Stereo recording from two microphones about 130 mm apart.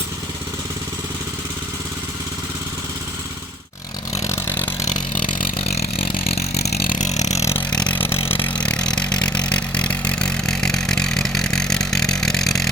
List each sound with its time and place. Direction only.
5.5 s vehicle: 45° left (ahead or behind)
6.8 s vehicle: 80° left; by 7.4 s 60° left (ahead or behind)
7.6 s vehicle: 10° left (ahead or behind)